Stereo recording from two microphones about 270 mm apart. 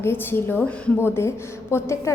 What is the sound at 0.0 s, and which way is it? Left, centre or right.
A woman's voice, centre.